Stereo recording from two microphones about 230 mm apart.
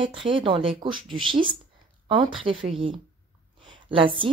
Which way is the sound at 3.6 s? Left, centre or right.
Right.